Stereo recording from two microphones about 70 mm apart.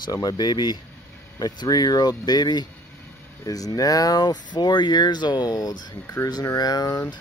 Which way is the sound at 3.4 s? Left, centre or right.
Left.